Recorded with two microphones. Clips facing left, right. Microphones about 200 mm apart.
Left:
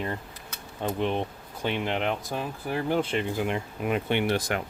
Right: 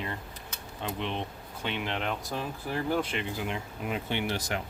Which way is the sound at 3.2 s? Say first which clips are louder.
Left 6 dB; 55° left (ahead or behind).